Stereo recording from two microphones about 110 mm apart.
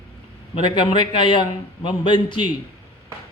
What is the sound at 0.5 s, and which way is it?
A man's voice, 50° left (ahead or behind).